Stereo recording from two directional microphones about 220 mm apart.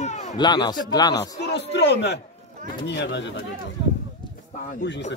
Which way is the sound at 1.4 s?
50° left (ahead or behind).